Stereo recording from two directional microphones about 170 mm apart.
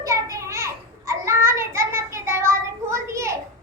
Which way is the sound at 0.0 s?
20° right (ahead or behind).